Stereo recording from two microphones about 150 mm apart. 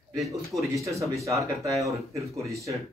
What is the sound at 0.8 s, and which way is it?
Speech, 20° right (ahead or behind).